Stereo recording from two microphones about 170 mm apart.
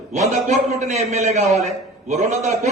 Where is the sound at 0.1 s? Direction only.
45° right (ahead or behind).